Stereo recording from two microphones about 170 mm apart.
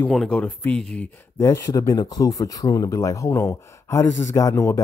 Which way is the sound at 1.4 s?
20° left (ahead or behind).